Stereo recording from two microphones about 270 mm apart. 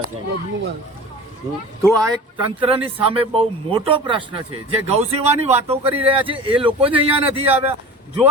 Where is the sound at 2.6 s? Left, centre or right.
Centre.